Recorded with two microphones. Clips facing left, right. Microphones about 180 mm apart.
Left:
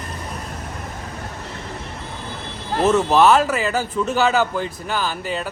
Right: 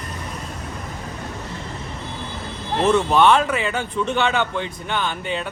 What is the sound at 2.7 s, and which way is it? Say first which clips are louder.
Speech: left 1 dB; 5° left (ahead or behind).